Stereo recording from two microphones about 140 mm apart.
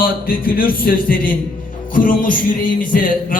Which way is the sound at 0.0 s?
90° left.